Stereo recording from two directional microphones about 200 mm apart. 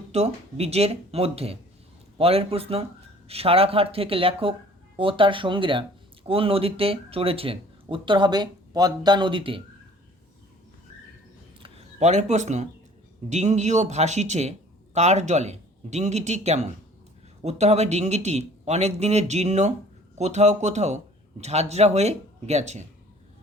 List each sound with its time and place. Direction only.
0.1 s a man's voice: 30° right (ahead or behind)
11.6 s a man's voice: 30° right (ahead or behind)